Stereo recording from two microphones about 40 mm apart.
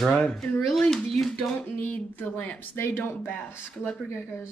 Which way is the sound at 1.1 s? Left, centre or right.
Centre.